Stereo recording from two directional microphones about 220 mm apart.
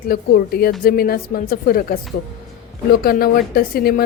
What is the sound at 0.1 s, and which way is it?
Speech, 45° left (ahead or behind).